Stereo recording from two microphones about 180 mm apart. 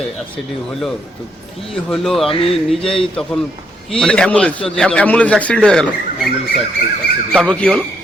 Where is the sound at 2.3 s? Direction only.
30° left (ahead or behind).